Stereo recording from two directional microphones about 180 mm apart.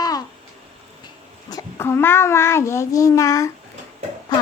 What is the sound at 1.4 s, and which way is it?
A child's voice, 15° left (ahead or behind).